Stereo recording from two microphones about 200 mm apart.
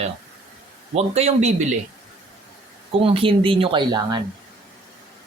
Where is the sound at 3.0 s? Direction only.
30° right (ahead or behind).